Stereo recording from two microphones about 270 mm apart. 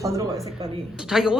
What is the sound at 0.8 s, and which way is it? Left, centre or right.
Speech, centre.